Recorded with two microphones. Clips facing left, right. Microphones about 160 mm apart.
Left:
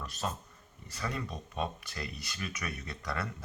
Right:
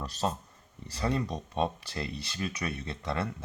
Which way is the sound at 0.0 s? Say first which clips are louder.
Right 5 dB; 30° right (ahead or behind).